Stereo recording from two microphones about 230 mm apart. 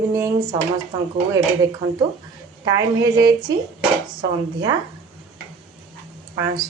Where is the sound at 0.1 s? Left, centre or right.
Centre.